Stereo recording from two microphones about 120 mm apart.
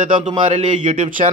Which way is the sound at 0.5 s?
85° right.